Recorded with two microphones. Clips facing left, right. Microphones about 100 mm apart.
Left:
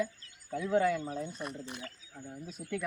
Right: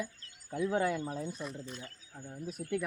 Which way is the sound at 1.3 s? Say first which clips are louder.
Left 1 dB; 65° left (ahead or behind).